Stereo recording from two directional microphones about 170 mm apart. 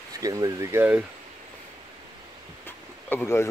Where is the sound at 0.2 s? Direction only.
20° right (ahead or behind).